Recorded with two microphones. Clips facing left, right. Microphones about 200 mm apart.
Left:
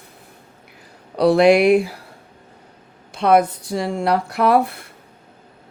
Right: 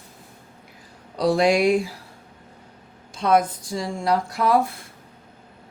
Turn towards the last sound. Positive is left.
turn(degrees=65)  # may be behind; listen again after turning